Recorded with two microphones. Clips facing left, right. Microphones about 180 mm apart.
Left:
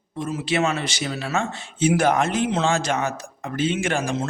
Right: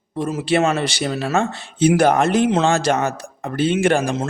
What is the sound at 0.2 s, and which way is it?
A man's voice, 40° right (ahead or behind).